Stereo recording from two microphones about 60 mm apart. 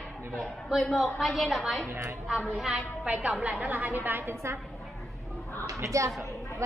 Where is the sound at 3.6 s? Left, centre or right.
Right.